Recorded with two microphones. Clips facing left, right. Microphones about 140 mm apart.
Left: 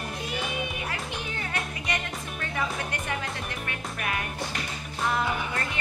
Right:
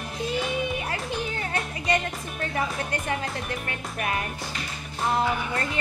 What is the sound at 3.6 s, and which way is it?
Music, 30° right (ahead or behind).